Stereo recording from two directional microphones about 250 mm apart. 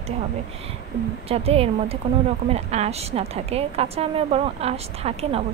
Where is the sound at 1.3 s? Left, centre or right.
Right.